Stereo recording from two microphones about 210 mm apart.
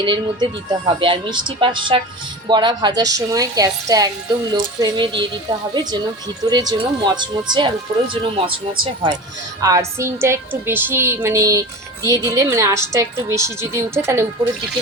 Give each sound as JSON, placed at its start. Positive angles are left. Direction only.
{"t": 0.0, "sound": "a woman's voice", "side_deg": -20}
{"t": 9.6, "sound": "a woman's voice", "side_deg": -15}